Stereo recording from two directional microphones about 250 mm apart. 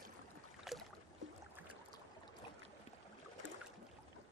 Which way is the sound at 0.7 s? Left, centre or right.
Centre.